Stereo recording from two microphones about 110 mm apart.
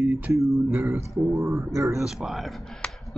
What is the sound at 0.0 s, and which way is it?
Music, 15° right (ahead or behind).